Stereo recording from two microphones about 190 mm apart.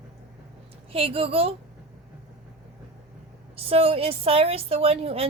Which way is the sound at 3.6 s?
30° right (ahead or behind).